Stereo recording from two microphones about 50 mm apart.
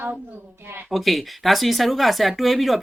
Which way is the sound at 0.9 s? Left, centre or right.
Centre.